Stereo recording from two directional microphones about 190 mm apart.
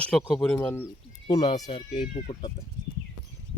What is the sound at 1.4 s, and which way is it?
Speech, 30° left (ahead or behind).